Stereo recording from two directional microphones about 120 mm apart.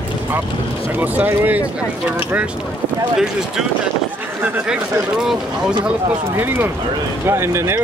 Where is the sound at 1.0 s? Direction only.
15° right (ahead or behind).